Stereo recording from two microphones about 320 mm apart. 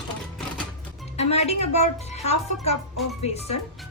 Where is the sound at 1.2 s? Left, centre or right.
Centre.